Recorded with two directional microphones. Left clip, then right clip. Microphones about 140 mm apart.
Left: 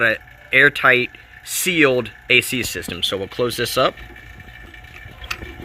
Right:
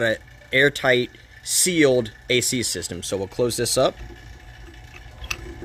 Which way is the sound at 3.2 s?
10° left (ahead or behind).